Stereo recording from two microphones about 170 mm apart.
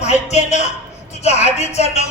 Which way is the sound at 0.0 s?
40° left (ahead or behind).